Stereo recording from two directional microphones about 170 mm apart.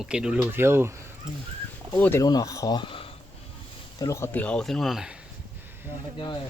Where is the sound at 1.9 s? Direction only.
15° left (ahead or behind); by 3.1 s 30° left (ahead or behind).